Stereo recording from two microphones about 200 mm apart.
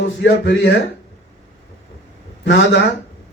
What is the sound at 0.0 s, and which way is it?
Speech, 65° left (ahead or behind).